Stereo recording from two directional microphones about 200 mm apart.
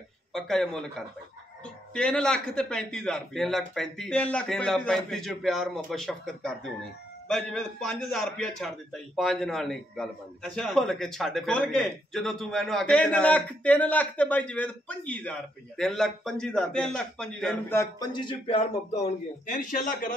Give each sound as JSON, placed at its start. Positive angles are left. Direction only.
{"t": 0.3, "sound": "a man's voice", "side_deg": 0}
{"t": 17.7, "sound": "a man's voice", "side_deg": 20}